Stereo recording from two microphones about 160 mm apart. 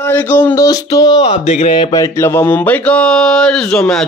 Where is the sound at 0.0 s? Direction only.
10° left (ahead or behind).